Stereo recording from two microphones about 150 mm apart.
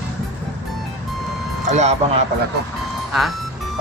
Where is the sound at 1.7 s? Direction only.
45° right (ahead or behind).